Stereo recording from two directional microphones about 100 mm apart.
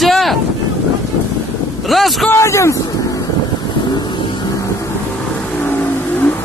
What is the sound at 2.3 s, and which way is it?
Speech, 30° left (ahead or behind).